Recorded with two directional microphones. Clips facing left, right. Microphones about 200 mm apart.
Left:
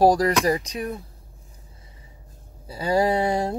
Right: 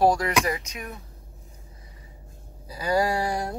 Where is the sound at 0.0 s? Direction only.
35° left (ahead or behind).